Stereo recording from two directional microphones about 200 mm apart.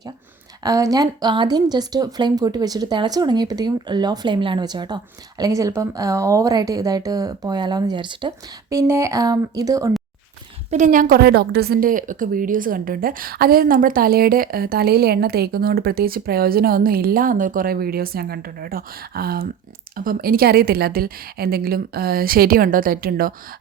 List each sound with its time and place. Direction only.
0.6 s a woman's voice: 15° right (ahead or behind)
10.7 s a woman's voice: 35° right (ahead or behind)